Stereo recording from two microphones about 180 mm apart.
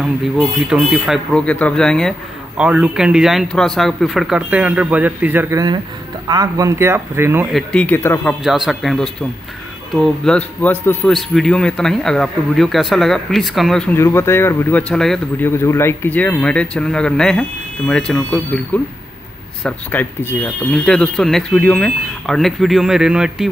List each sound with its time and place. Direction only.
0.0 s a man's voice: centre (ahead or behind)
7.5 s speech: 5° left (ahead or behind)
8.5 s a man's voice: centre (ahead or behind)
13.9 s a man's voice: 15° left (ahead or behind); by 23.5 s 5° right (ahead or behind)